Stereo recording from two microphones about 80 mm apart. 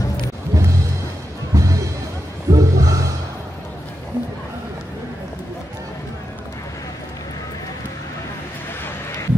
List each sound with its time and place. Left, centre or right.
0.5 s music: right